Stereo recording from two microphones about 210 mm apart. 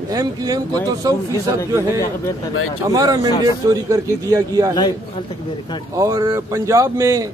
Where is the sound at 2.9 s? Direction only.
15° right (ahead or behind).